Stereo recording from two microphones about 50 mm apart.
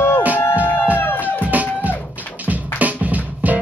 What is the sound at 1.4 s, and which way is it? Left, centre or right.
Music, right.